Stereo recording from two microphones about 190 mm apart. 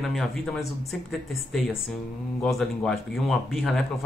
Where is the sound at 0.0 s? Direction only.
Centre (ahead or behind).